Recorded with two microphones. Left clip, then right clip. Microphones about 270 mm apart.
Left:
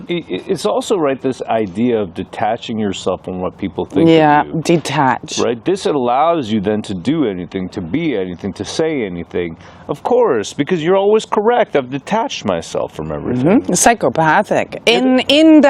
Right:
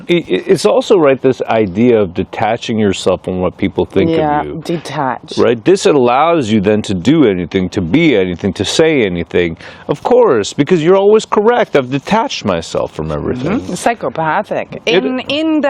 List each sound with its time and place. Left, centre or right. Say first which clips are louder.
0.1 s speech: right 8 dB; right
4.0 s speech: left 7 dB; centre
5.5 s speech: right 8 dB; right
9.9 s speech: right 4 dB; right
13.5 s speech: left 5 dB; centre